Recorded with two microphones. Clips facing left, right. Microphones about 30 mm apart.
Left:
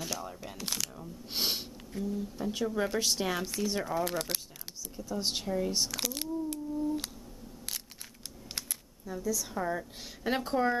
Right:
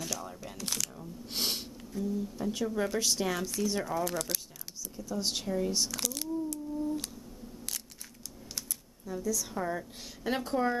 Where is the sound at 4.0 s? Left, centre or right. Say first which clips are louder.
Left 1 dB; left.